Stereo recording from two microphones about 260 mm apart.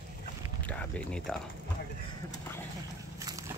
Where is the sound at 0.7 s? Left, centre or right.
Centre.